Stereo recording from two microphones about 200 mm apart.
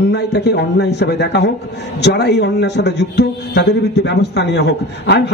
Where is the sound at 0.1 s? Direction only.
60° left (ahead or behind).